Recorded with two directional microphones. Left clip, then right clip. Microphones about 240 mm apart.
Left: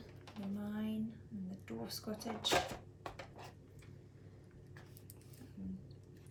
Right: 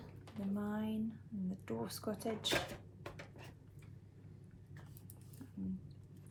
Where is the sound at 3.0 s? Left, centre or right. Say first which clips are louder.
Left 3 dB; centre.